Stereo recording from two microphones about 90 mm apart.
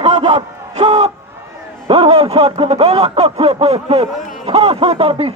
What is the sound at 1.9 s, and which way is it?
Speech, 90° right.